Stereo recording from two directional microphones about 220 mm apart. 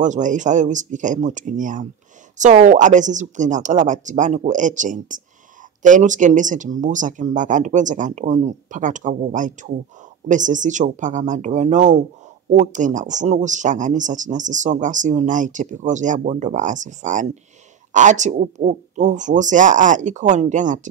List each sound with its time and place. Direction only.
0.0 s speech: 35° right (ahead or behind)